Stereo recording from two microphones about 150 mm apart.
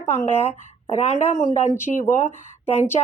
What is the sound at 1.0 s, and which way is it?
Speech, 55° left (ahead or behind).